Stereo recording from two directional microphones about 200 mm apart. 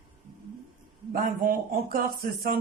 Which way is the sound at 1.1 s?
45° right (ahead or behind).